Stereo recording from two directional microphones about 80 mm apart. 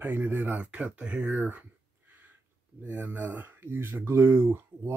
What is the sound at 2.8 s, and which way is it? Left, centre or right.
Speech, right.